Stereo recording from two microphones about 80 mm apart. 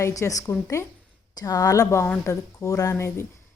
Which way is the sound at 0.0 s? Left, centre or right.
Left.